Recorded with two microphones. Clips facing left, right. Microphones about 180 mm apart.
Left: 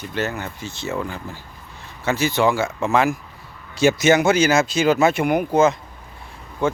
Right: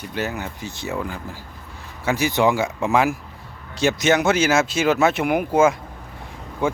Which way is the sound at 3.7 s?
Centre (ahead or behind).